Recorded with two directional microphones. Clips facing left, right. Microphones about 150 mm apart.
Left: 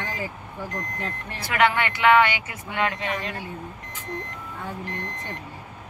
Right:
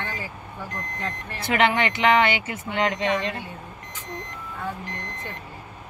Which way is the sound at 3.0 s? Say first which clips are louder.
Right 5 dB; 25° right (ahead or behind).